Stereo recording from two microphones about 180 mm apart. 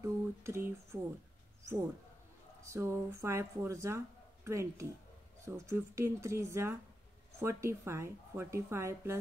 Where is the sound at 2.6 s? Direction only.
15° right (ahead or behind).